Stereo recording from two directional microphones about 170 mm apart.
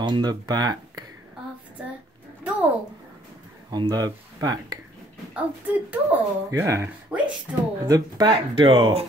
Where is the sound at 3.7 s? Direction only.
25° right (ahead or behind).